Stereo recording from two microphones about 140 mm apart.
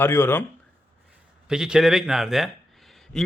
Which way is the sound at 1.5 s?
5° right (ahead or behind).